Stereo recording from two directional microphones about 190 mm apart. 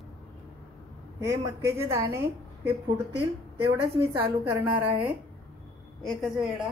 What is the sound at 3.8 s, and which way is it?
Speech, 25° right (ahead or behind).